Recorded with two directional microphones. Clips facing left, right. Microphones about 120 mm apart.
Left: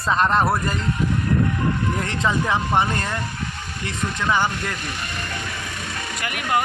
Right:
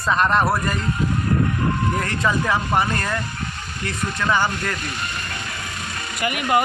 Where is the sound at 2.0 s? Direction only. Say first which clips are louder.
Right 1 dB; 25° left (ahead or behind).